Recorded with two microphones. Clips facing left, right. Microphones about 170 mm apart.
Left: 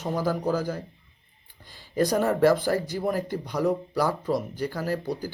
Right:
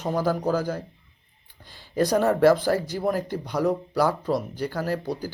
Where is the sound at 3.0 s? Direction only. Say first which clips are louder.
Right 2 dB; 45° right (ahead or behind).